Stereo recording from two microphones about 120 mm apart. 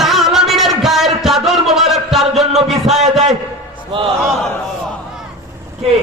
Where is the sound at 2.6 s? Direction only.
Centre (ahead or behind).